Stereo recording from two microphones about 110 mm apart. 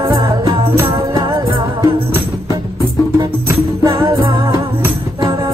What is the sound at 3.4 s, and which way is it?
Music, 35° right (ahead or behind).